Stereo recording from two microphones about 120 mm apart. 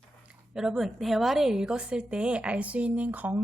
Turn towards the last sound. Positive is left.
turn(degrees=-15)  # may be behind; listen again after turning